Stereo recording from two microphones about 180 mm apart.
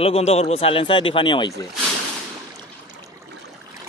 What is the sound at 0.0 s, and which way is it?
Speech, 35° left (ahead or behind).